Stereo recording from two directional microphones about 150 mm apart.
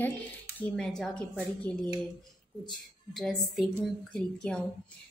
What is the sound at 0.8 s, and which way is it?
A woman's voice, 5° left (ahead or behind).